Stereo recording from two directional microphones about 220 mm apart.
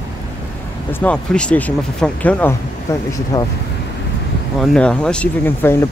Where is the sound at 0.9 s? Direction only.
5° left (ahead or behind).